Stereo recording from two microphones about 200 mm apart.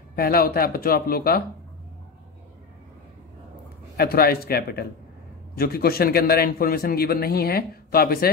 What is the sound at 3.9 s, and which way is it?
A man's voice, 50° left (ahead or behind).